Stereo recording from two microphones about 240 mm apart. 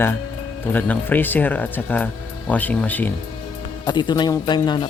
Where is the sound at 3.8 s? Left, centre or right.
Centre.